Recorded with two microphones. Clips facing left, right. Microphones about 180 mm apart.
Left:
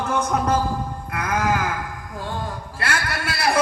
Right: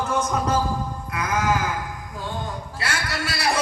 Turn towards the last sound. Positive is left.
turn(degrees=55)  # may be behind; listen again after turning